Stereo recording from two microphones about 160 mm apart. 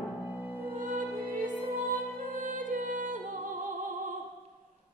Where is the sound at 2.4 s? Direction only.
55° right (ahead or behind).